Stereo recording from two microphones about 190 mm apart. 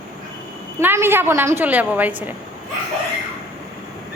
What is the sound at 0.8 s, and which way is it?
A woman's voice, 10° right (ahead or behind).